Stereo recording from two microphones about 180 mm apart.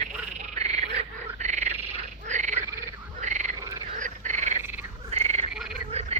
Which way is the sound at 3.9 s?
40° right (ahead or behind).